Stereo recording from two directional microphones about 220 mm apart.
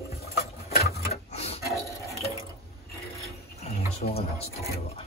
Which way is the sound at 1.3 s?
30° left (ahead or behind).